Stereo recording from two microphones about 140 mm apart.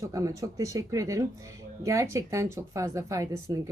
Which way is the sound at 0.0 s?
20° right (ahead or behind).